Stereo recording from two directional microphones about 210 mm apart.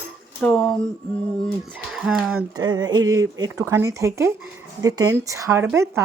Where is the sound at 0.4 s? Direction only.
5° left (ahead or behind).